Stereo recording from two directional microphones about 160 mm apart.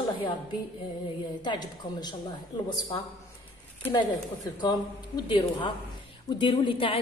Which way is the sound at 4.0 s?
25° left (ahead or behind).